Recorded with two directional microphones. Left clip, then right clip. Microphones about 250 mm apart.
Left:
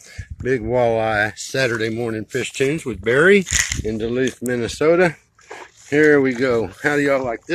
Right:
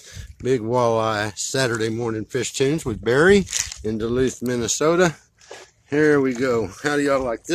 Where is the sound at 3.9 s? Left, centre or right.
Centre.